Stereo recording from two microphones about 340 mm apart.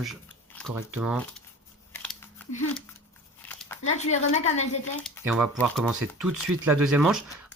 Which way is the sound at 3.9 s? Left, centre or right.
Centre.